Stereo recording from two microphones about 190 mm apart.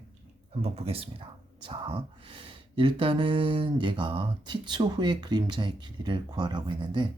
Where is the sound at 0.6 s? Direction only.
30° right (ahead or behind).